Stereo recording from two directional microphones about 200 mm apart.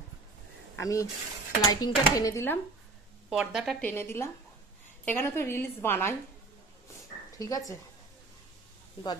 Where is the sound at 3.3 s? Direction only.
Centre (ahead or behind).